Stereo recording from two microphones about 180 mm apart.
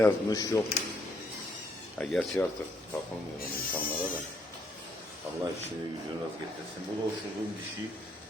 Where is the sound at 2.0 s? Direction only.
5° left (ahead or behind).